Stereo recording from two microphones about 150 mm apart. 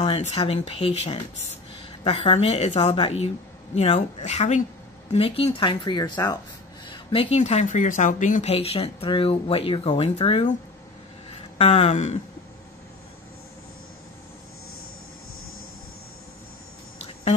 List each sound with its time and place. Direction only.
0.3 s a woman's voice: 40° left (ahead or behind); by 6.3 s 25° left (ahead or behind)
6.9 s speech: 35° left (ahead or behind)
11.2 s a sound: 40° left (ahead or behind)